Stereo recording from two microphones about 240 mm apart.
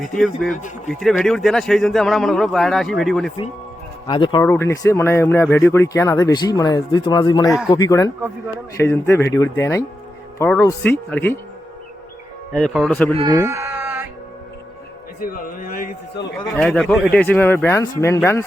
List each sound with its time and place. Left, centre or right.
0.1 s a man's voice: centre
4.0 s speech: centre
12.5 s a man's voice: centre
13.1 s sheep: centre
15.2 s a man's voice: left
16.6 s speech: centre